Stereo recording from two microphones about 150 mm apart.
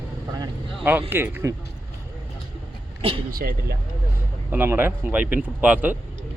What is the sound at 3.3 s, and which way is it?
Speech, 80° right.